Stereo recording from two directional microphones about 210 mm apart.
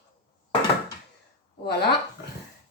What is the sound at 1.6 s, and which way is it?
Speech, 50° left (ahead or behind).